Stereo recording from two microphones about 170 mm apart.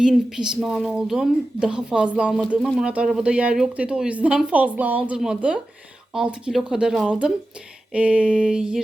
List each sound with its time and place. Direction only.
0.0 s a woman's voice: 5° right (ahead or behind)